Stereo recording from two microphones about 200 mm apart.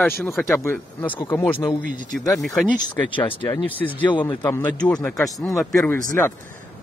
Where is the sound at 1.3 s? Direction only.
10° left (ahead or behind).